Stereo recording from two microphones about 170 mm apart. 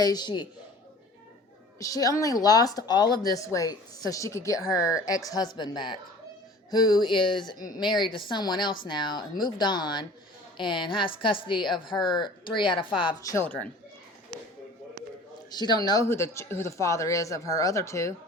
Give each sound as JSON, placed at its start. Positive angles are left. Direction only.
{"t": 0.0, "sound": "speech", "side_deg": 25}
{"t": 1.8, "sound": "speech", "side_deg": 20}
{"t": 15.4, "sound": "speech", "side_deg": 25}